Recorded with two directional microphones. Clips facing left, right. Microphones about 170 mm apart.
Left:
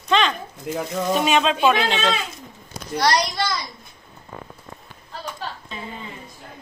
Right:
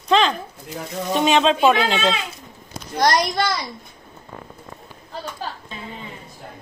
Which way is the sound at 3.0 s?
50° right (ahead or behind).